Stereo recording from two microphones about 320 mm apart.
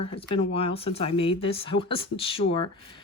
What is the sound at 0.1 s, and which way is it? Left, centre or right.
Speech, centre.